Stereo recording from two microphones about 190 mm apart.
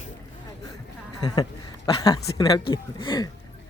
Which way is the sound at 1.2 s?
20° left (ahead or behind).